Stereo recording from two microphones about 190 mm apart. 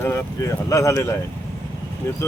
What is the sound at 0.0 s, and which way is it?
Speech, 15° left (ahead or behind).